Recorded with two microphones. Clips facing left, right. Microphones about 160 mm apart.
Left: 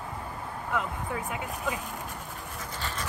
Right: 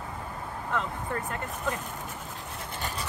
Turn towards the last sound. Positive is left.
turn(degrees=-15)  # may be behind; listen again after turning